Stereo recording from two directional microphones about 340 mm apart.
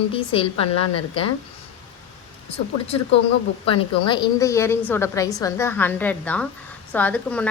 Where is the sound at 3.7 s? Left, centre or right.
Centre.